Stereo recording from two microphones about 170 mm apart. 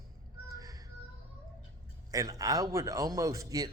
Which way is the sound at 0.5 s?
20° right (ahead or behind).